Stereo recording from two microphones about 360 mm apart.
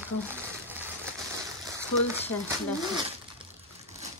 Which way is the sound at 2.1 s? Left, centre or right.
Centre.